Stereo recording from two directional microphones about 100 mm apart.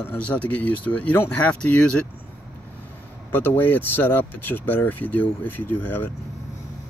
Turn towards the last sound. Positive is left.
turn(degrees=20)  # may be behind; listen again after turning